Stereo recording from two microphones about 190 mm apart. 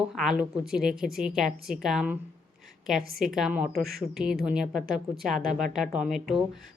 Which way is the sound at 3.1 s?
Centre (ahead or behind).